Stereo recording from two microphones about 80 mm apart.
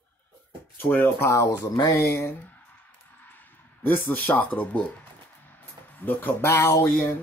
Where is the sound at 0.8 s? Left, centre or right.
Left.